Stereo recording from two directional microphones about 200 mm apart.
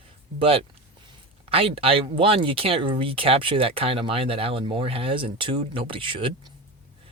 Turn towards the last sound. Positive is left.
turn(degrees=-25)  # may be behind; listen again after turning